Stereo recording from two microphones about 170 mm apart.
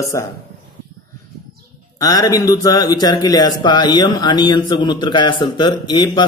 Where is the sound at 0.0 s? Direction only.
20° left (ahead or behind).